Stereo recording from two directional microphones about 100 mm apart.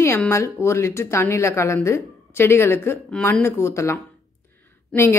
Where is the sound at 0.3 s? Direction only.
25° left (ahead or behind).